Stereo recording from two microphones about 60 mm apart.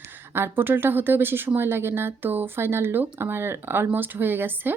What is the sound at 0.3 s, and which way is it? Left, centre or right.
Speech, right.